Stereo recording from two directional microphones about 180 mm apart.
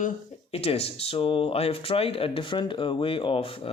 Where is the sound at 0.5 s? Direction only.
35° left (ahead or behind).